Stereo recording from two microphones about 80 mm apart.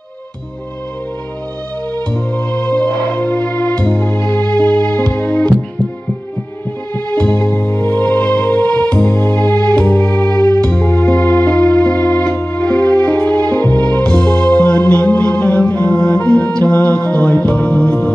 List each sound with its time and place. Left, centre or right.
2.0 s music: centre
7.1 s music: centre